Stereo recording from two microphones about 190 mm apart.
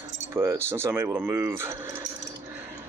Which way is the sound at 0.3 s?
15° right (ahead or behind).